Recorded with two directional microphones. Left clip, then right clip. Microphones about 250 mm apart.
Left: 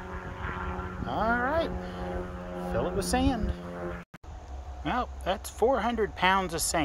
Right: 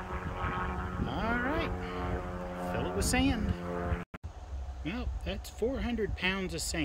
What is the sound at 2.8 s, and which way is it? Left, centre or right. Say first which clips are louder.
Speech: left 4 dB; centre.